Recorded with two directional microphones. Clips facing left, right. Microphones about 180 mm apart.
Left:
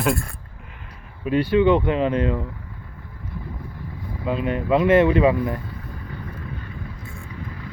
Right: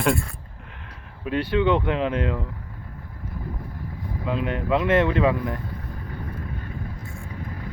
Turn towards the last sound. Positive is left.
turn(degrees=-45)  # may be behind; listen again after turning